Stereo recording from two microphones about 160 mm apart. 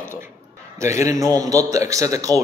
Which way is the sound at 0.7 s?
20° right (ahead or behind).